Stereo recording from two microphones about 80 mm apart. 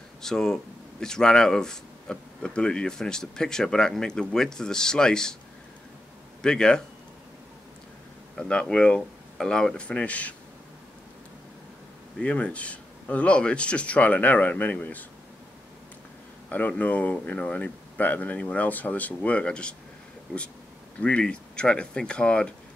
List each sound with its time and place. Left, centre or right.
0.2 s speech: centre
6.4 s speech: centre
8.4 s speech: centre
12.2 s speech: centre
16.4 s speech: centre
21.0 s speech: centre